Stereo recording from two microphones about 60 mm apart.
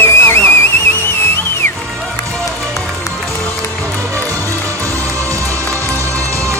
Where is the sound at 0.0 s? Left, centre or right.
Left.